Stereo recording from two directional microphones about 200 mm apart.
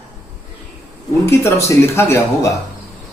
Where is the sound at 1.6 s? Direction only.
10° left (ahead or behind).